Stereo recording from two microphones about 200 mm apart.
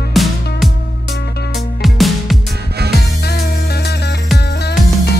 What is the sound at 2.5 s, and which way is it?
Music, 55° right (ahead or behind).